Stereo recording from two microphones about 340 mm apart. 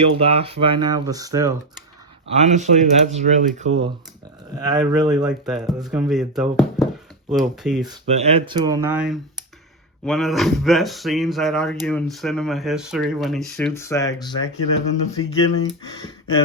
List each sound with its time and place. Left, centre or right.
0.0 s speech: centre
2.3 s speech: centre
7.8 s speech: centre
15.2 s speech: left